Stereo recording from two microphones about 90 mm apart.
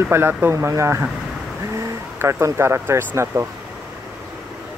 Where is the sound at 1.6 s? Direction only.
30° right (ahead or behind).